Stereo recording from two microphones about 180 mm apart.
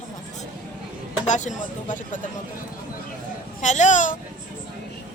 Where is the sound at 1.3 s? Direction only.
45° left (ahead or behind).